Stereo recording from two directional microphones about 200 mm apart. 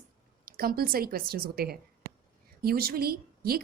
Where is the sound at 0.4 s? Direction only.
45° right (ahead or behind).